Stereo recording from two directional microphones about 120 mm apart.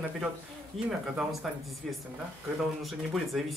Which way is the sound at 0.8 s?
5° right (ahead or behind).